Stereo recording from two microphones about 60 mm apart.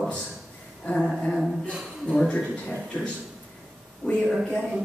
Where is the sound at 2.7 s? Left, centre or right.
Centre.